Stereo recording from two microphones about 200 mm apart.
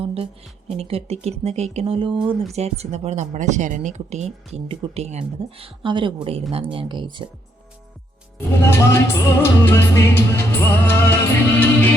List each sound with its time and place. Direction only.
0.0 s a woman's voice: 30° right (ahead or behind)
8.4 s music: 10° left (ahead or behind)